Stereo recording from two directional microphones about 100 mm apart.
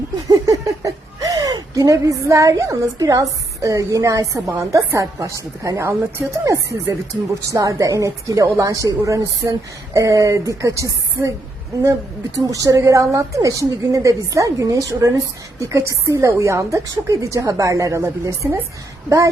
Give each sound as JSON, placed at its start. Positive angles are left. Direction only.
{"t": 0.3, "sound": "a woman's voice", "side_deg": -35}
{"t": 12.5, "sound": "a woman's voice", "side_deg": -35}